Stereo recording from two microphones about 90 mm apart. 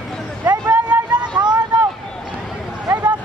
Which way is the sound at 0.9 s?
20° right (ahead or behind).